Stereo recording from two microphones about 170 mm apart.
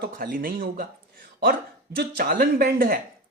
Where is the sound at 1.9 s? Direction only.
65° right (ahead or behind).